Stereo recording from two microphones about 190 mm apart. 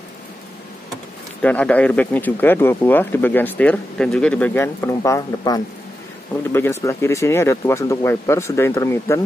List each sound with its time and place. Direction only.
1.4 s speech: 5° left (ahead or behind)